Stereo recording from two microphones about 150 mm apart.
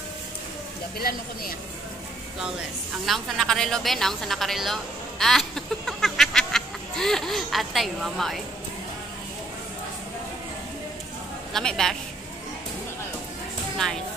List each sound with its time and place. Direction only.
0.9 s speech: 85° left
3.1 s a woman's voice: 5° left (ahead or behind)
5.2 s chicken: centre (ahead or behind)
11.5 s a woman's voice: 5° left (ahead or behind)